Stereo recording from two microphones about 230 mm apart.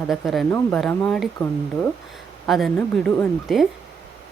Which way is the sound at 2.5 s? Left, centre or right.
Centre.